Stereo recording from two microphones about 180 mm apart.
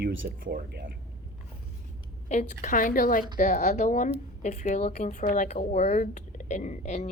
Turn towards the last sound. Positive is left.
turn(degrees=40)  # may be behind; listen again after turning